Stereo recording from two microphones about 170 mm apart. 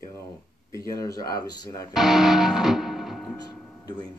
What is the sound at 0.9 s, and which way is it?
Speech, 20° left (ahead or behind).